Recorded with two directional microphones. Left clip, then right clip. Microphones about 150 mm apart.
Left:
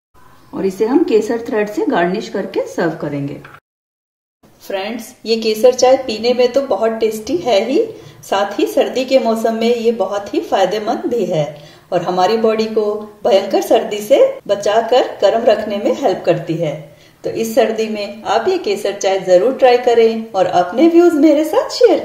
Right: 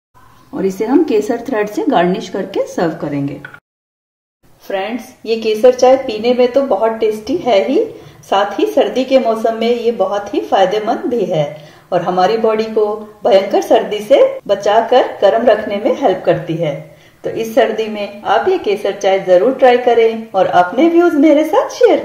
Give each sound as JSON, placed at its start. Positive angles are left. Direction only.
{"t": 0.6, "sound": "a woman's voice", "side_deg": -60}
{"t": 4.6, "sound": "speech", "side_deg": 5}